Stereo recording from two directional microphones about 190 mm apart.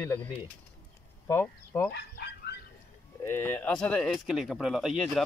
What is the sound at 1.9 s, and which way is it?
Speech, 60° left (ahead or behind).